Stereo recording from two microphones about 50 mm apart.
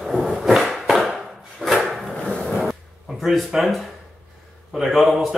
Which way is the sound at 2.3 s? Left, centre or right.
Centre.